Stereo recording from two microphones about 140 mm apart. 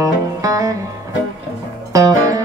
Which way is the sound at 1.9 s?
25° right (ahead or behind).